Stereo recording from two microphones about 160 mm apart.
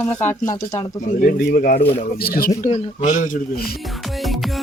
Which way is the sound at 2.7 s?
50° left (ahead or behind).